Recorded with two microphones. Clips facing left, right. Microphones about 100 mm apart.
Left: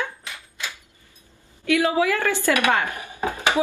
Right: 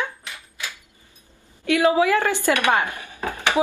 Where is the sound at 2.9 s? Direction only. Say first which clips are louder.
Left 2 dB; 20° left (ahead or behind).